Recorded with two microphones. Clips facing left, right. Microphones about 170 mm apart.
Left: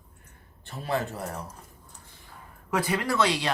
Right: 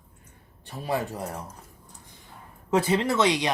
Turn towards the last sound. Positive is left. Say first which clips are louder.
# right 2 dB
turn(degrees=-20)  # may be behind; listen again after turning